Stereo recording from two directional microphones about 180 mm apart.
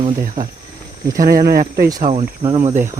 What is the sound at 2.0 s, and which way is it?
Speech, 40° right (ahead or behind).